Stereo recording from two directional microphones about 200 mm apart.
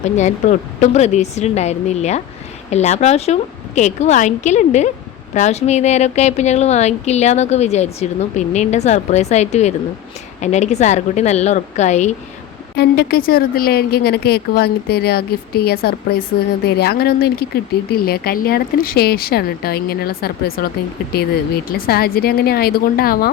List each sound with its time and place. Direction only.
0.0 s speech: 35° left (ahead or behind)
12.7 s speech: 55° left (ahead or behind)
21.7 s speech: 50° left (ahead or behind)